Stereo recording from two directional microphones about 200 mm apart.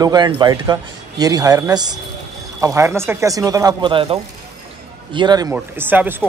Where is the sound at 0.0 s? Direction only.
20° right (ahead or behind).